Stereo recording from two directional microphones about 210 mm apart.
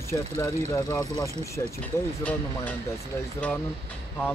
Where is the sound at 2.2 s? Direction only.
5° left (ahead or behind).